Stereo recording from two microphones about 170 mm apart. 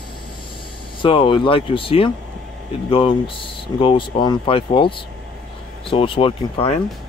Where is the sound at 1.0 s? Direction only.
30° left (ahead or behind).